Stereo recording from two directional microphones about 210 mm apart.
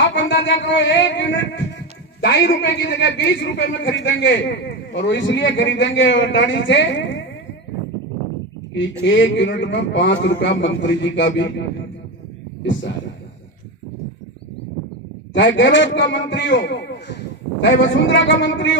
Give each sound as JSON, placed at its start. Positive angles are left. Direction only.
{"t": 0.0, "sound": "a sound", "side_deg": 60}
{"t": 2.2, "sound": "a man's voice", "side_deg": 60}
{"t": 8.7, "sound": "a man's voice", "side_deg": 60}
{"t": 15.3, "sound": "a man's voice", "side_deg": 60}